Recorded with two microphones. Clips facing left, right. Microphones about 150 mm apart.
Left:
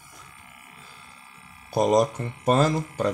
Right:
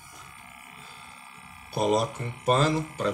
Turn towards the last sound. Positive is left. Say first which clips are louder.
# left 3 dB
turn(degrees=45)  # may be behind; listen again after turning